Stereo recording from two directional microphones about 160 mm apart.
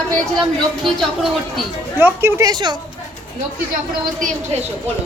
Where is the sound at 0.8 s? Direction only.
Centre (ahead or behind).